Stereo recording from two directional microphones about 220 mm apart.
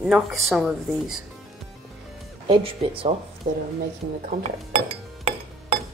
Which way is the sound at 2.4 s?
25° right (ahead or behind).